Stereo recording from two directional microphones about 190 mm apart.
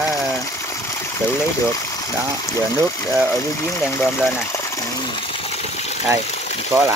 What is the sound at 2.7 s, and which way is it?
Speech, 15° left (ahead or behind).